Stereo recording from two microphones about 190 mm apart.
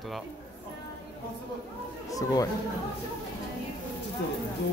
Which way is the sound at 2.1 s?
20° left (ahead or behind).